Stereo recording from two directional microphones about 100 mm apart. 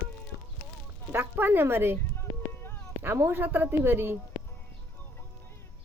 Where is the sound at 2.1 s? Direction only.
20° left (ahead or behind).